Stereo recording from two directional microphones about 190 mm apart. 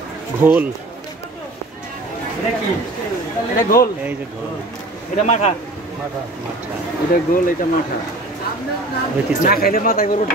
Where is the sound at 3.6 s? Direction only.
50° left (ahead or behind).